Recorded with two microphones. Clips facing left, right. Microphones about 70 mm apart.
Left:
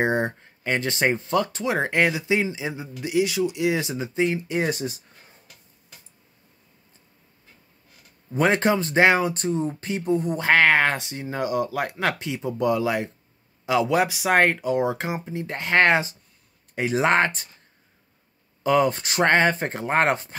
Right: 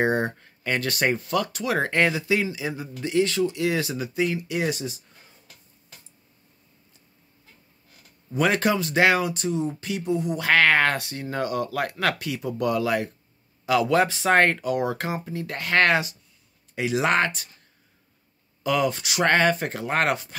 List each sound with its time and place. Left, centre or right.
0.0 s speech: left
3.1 s speech: centre; by 5.0 s left
8.3 s speech: left
18.6 s speech: left